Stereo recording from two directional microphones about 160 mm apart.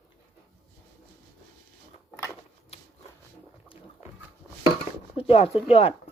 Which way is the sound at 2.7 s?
40° left (ahead or behind).